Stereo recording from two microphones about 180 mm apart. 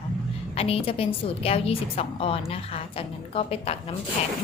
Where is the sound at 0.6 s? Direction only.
35° left (ahead or behind).